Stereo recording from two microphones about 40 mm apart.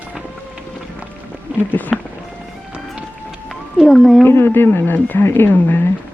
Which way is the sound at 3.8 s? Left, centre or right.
Centre.